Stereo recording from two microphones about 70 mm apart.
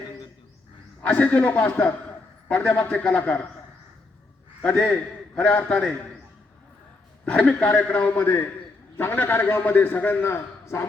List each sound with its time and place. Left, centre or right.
1.0 s a man's voice: centre
4.6 s a man's voice: centre
7.3 s a man's voice: centre; by 10.8 s left